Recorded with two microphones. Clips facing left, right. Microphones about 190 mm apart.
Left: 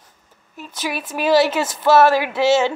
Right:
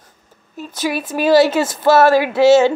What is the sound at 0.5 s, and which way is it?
Speech, 35° right (ahead or behind).